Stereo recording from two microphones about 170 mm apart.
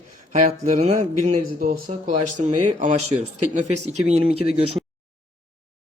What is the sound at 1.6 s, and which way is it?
Speech, 55° right (ahead or behind).